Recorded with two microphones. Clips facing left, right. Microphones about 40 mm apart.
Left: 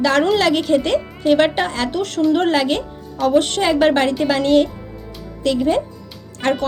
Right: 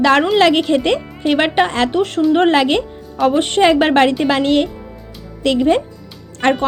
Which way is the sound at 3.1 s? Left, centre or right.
Right.